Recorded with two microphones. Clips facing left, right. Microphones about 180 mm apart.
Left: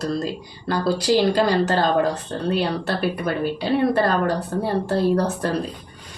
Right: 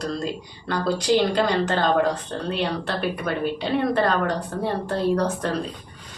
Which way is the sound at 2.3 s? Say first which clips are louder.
Left 2 dB; 35° left (ahead or behind).